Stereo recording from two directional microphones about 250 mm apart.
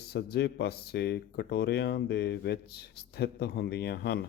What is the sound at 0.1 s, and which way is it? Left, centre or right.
Speech, left.